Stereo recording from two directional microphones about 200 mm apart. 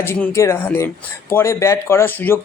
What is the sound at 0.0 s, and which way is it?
Speech, 10° left (ahead or behind).